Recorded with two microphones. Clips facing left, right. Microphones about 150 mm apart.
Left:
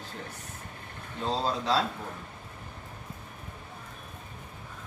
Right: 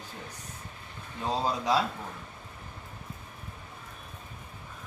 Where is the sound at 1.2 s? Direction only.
15° right (ahead or behind).